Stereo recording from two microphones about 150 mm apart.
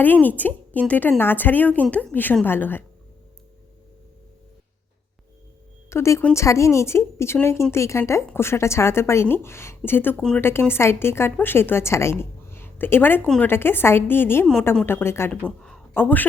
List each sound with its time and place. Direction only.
0.0 s a woman's voice: 10° left (ahead or behind)
5.9 s a woman's voice: 20° left (ahead or behind)
12.2 s a sound: 15° left (ahead or behind)
13.2 s speech: 5° left (ahead or behind)
13.5 s a woman's voice: 15° left (ahead or behind)
15.4 s a sound: centre (ahead or behind)
16.0 s a woman's voice: 10° left (ahead or behind)